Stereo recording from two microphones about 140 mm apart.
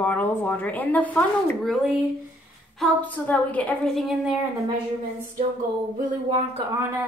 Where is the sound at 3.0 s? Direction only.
10° left (ahead or behind).